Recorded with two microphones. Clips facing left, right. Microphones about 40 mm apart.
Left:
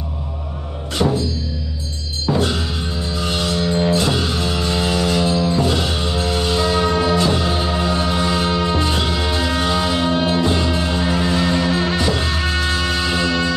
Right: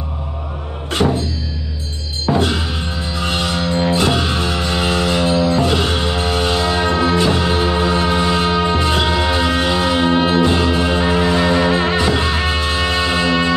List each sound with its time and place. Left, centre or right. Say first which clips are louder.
2.2 s music: right 2 dB; right
3.9 s music: right 2 dB; right